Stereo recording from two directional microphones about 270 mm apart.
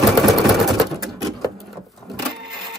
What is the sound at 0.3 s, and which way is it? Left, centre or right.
Typewriter, centre.